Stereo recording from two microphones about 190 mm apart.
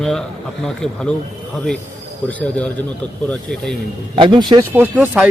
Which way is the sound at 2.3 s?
5° left (ahead or behind).